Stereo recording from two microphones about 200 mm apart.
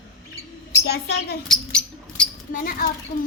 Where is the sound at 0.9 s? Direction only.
55° left (ahead or behind).